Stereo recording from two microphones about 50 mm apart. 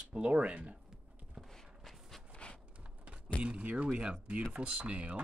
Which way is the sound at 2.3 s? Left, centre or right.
Left.